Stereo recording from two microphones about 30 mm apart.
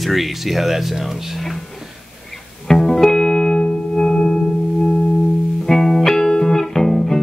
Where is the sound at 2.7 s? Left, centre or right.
Centre.